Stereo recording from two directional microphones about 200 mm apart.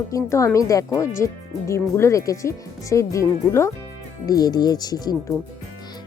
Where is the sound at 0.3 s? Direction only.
15° left (ahead or behind).